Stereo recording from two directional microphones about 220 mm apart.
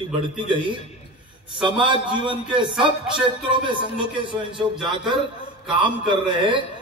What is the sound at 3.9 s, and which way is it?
Speech, 20° right (ahead or behind).